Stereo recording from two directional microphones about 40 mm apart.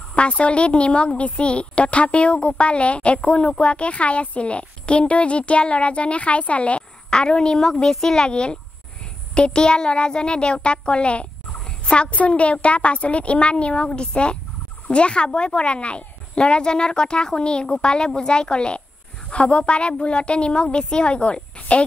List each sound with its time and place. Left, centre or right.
0.1 s a woman's voice: left; by 8.3 s centre
8.3 s a child's voice: left